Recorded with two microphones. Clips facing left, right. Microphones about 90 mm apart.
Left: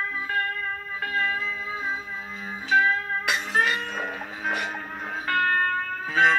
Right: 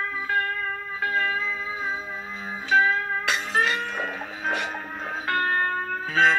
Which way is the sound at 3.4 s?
15° left (ahead or behind).